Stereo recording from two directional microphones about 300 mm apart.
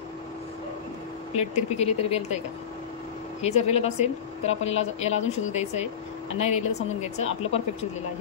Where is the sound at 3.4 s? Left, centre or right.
Left.